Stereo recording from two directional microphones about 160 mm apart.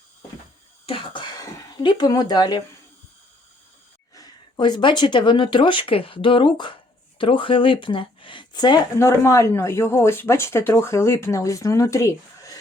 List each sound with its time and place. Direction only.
0.9 s speech: 30° left (ahead or behind)
4.1 s speech: 25° left (ahead or behind)